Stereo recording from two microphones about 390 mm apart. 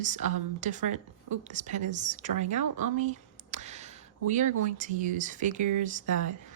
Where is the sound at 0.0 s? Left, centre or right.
Centre.